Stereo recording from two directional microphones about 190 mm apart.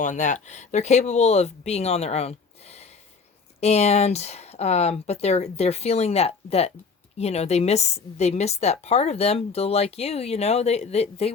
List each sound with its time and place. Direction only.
0.0 s a woman's voice: 40° left (ahead or behind)